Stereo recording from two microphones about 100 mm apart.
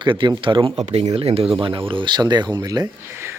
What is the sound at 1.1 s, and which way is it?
Speech, 80° right.